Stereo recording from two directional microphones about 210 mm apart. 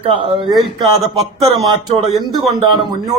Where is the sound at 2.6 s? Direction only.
20° right (ahead or behind).